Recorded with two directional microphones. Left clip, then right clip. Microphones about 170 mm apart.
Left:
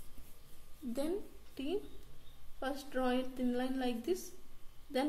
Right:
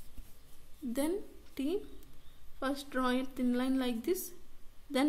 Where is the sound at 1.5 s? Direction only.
50° right (ahead or behind).